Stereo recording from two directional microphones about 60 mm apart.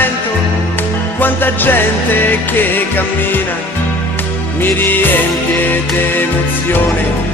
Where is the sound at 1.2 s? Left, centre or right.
Left.